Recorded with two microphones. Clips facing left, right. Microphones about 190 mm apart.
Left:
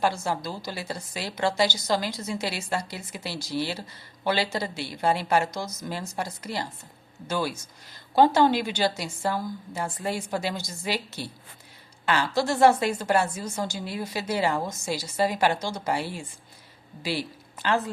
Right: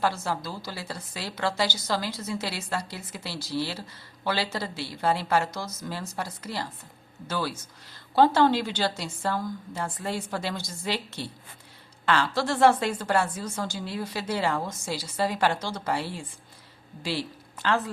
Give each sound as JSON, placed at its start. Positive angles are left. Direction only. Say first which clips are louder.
{"t": 0.0, "sound": "a woman's voice", "louder": "left 2 dB", "side_deg": 15}
{"t": 12.0, "sound": "a woman's voice", "louder": "left 1 dB", "side_deg": 10}